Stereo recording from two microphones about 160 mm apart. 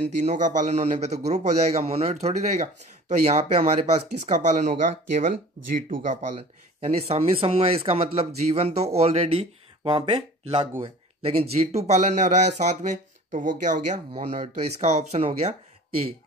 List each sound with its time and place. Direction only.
0.2 s a man's voice: 50° right (ahead or behind)
6.8 s a man's voice: 40° right (ahead or behind); by 14.2 s 55° right (ahead or behind)
14.2 s a man's voice: 40° right (ahead or behind)